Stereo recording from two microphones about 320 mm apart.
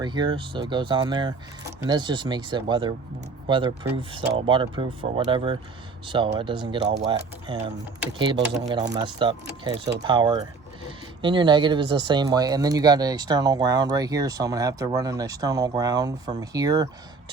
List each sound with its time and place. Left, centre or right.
0.0 s speech: centre